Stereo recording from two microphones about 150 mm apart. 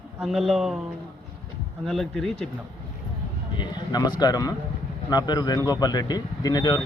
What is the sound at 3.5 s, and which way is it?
Speech, 30° left (ahead or behind).